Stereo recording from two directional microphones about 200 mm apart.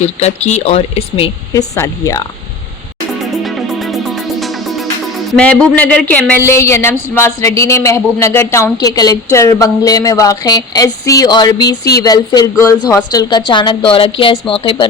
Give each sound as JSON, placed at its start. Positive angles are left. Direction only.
{"t": 0.2, "sound": "speech", "side_deg": 35}
{"t": 1.5, "sound": "a woman's voice", "side_deg": 15}
{"t": 3.3, "sound": "music", "side_deg": 0}
{"t": 5.4, "sound": "a woman's voice", "side_deg": 5}